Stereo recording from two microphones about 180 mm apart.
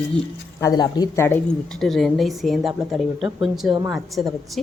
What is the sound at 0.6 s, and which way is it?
Speech, 20° left (ahead or behind).